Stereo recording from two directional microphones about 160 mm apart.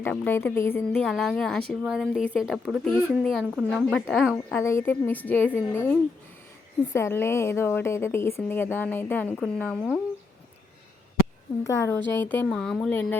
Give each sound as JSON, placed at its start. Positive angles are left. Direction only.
{"t": 0.0, "sound": "speech", "side_deg": 15}
{"t": 1.0, "sound": "a woman's voice", "side_deg": 0}
{"t": 3.9, "sound": "speech", "side_deg": 0}
{"t": 4.5, "sound": "speech", "side_deg": 15}
{"t": 11.6, "sound": "a woman's voice", "side_deg": 20}
{"t": 12.5, "sound": "speech", "side_deg": 5}